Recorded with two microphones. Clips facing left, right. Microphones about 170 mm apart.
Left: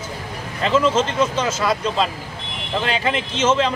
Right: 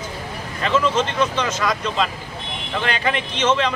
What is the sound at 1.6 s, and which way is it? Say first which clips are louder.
Speech: left 2 dB; 30° left (ahead or behind).